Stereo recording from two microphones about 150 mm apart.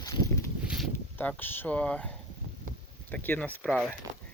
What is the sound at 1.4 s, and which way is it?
Speech, 15° left (ahead or behind).